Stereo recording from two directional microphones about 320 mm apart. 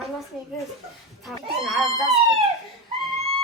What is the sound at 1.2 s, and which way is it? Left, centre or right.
Speech, centre.